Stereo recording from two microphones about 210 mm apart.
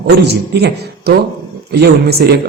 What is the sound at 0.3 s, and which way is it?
A man's voice, 50° right (ahead or behind).